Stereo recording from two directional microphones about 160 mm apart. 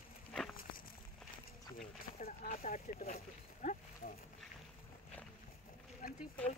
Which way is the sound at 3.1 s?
60° left (ahead or behind).